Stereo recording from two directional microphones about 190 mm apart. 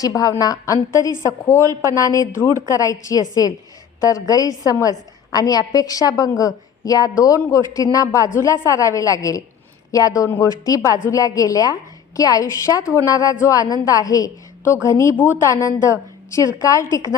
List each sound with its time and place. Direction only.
0.0 s a woman's voice: 20° left (ahead or behind)